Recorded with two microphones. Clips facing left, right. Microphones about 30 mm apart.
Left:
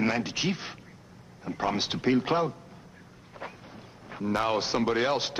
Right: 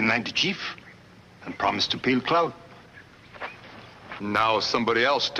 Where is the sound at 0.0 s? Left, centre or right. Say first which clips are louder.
Right 4 dB; right.